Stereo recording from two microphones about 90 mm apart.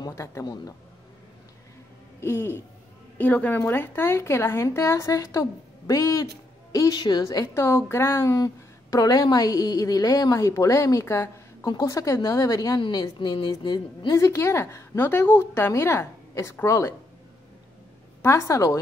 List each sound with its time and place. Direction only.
0.0 s a man's voice: 35° left (ahead or behind)
2.1 s a woman's voice: 30° left (ahead or behind)
7.0 s speech: 55° left (ahead or behind)
7.2 s a woman's voice: 35° left (ahead or behind)
8.9 s a woman's voice: 45° left (ahead or behind)
11.6 s a woman's voice: 50° left (ahead or behind)
11.9 s a woman's voice: 35° left (ahead or behind)
13.2 s speech: 60° left (ahead or behind)
14.1 s a woman's voice: 35° left (ahead or behind)
18.2 s a woman's voice: 30° left (ahead or behind)